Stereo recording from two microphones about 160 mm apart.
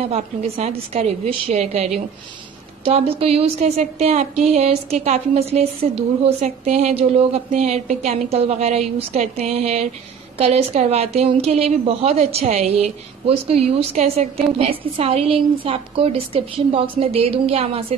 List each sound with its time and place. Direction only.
0.1 s a woman's voice: 40° right (ahead or behind)